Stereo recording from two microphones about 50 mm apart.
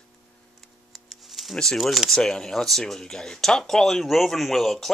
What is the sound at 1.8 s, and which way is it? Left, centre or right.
Speech, centre.